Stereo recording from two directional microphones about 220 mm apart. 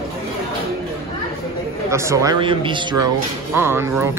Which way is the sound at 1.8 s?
15° right (ahead or behind).